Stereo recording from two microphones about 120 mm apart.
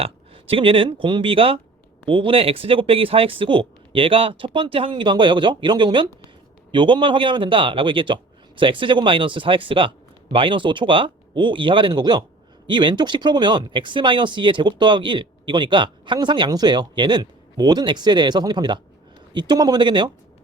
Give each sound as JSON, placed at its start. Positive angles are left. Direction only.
{"t": 0.0, "sound": "speech", "side_deg": -50}